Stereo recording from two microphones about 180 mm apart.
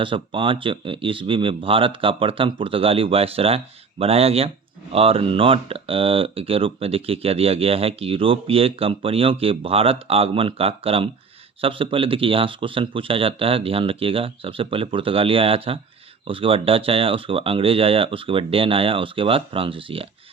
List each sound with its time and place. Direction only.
0.0 s speech: 30° right (ahead or behind)